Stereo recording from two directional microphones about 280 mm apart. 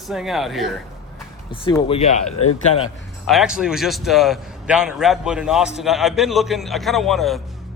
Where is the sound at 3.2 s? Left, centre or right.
Centre.